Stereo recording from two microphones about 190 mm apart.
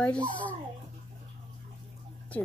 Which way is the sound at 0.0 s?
5° left (ahead or behind).